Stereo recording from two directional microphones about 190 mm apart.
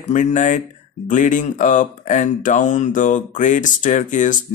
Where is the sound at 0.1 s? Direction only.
40° left (ahead or behind).